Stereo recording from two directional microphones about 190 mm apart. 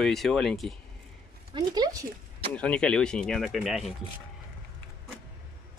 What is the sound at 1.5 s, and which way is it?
Speech, 20° right (ahead or behind).